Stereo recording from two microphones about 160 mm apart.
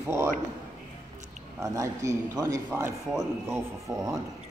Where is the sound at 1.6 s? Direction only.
20° right (ahead or behind).